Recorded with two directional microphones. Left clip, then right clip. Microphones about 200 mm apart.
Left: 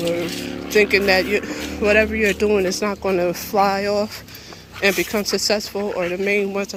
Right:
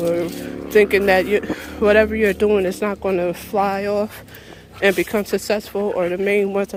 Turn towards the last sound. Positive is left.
turn(degrees=-20)  # may be behind; listen again after turning